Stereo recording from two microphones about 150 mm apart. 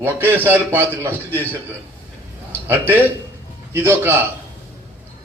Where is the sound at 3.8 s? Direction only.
15° right (ahead or behind).